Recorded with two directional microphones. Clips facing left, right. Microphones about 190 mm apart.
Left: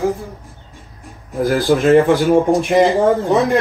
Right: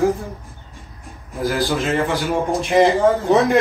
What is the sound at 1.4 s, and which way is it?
Speech, 55° left (ahead or behind).